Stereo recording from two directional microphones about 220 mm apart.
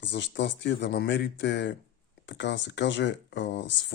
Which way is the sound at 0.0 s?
55° left (ahead or behind).